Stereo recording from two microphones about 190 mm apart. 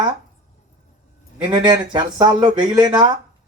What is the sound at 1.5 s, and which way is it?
Speech, 20° right (ahead or behind).